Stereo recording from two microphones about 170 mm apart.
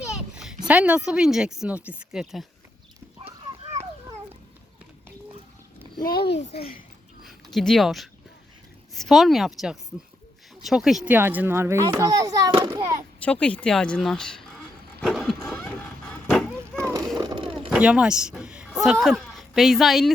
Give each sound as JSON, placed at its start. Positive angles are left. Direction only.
{"t": 0.2, "sound": "a sound", "side_deg": -5}
{"t": 0.6, "sound": "speech", "side_deg": -5}
{"t": 6.0, "sound": "a child's voice", "side_deg": 65}
{"t": 7.3, "sound": "a child's voice", "side_deg": 0}
{"t": 13.2, "sound": "speech", "side_deg": 5}
{"t": 15.0, "sound": "horse", "side_deg": 0}
{"t": 16.7, "sound": "a sound", "side_deg": -20}
{"t": 17.2, "sound": "vehicle", "side_deg": -25}
{"t": 17.7, "sound": "speech", "side_deg": -5}